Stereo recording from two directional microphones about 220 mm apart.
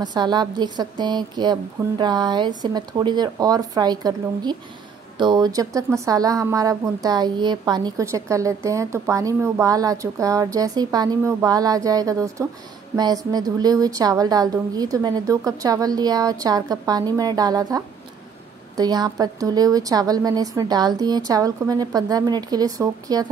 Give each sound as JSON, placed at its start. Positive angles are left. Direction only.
{"t": 0.0, "sound": "a woman's voice", "side_deg": -20}